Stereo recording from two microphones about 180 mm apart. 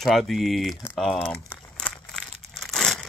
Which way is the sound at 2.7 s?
5° left (ahead or behind).